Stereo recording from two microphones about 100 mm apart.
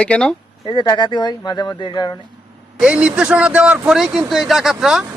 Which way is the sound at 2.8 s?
10° right (ahead or behind).